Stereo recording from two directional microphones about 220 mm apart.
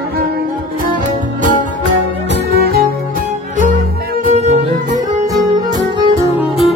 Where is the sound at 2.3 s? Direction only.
45° right (ahead or behind).